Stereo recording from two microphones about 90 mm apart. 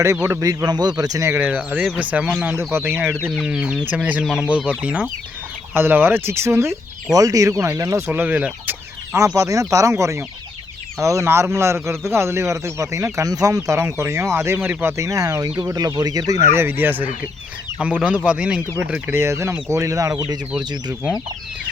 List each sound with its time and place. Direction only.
0.2 s speech: 25° right (ahead or behind)
0.4 s speech: 50° right (ahead or behind)
1.3 s speech: 20° right (ahead or behind)
2.7 s speech: 25° right (ahead or behind)
3.4 s speech: 10° right (ahead or behind)
5.7 s speech: 25° right (ahead or behind)
7.1 s a man's voice: 40° right (ahead or behind)
8.0 s speech: 20° right (ahead or behind)
9.1 s a man's voice: 35° right (ahead or behind)
18.3 s speech: 10° right (ahead or behind)
19.1 s a man's voice: 30° right (ahead or behind)
20.6 s speech: 55° right (ahead or behind)